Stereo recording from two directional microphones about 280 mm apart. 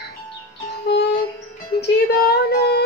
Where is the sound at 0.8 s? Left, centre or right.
Left.